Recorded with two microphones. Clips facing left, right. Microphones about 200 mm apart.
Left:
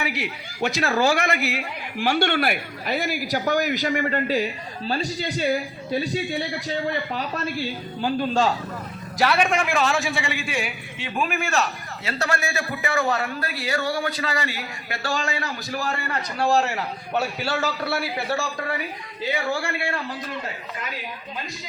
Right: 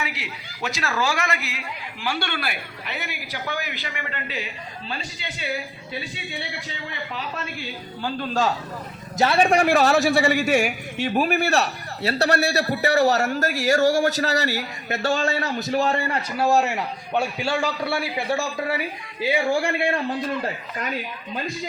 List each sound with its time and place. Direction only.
0.1 s a woman's voice: 55° left (ahead or behind)
0.8 s a man's voice: 40° left (ahead or behind)
1.0 s a woman's voice: 60° left (ahead or behind)
2.8 s a man's voice: 40° left (ahead or behind)
9.1 s a man's voice: 25° right (ahead or behind)
14.8 s a man's voice: 25° right (ahead or behind)
16.4 s a man's voice: centre (ahead or behind)
19.2 s a man's voice: 10° right (ahead or behind)